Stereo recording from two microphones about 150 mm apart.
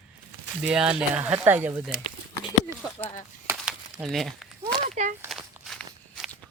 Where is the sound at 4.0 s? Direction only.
Centre (ahead or behind).